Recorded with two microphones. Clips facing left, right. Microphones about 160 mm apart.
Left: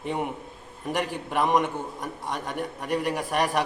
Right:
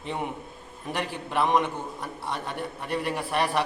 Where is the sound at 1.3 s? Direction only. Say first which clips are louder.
Even; 10° left (ahead or behind).